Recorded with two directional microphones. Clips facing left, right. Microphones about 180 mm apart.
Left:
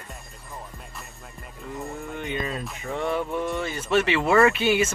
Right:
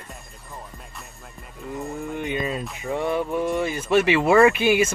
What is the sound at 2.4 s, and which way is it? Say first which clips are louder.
Speech: right 4 dB; 5° right (ahead or behind).